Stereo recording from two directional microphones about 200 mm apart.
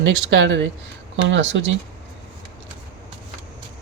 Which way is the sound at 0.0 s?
65° right (ahead or behind).